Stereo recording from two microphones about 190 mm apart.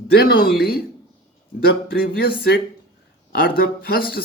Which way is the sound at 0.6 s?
55° left (ahead or behind).